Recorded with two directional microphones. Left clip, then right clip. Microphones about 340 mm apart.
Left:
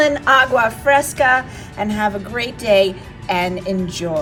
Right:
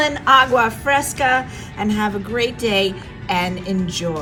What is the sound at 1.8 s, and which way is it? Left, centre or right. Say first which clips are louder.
A woman's voice: left 2 dB; centre.